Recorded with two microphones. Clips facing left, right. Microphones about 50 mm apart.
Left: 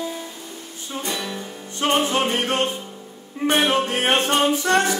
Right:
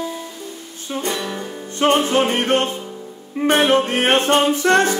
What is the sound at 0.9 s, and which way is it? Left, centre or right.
Music, right.